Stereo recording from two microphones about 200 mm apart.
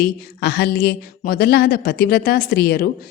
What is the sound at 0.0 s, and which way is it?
A woman's voice, 55° left (ahead or behind).